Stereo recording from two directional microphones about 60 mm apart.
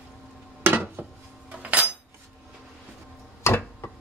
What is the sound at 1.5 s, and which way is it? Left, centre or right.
Cutlery, right.